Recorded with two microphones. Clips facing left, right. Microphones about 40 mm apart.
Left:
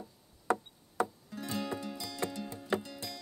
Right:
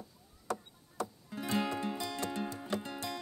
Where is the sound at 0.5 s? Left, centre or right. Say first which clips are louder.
Left 6 dB; left.